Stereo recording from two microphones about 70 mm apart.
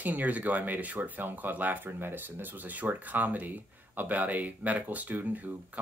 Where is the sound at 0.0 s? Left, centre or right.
Right.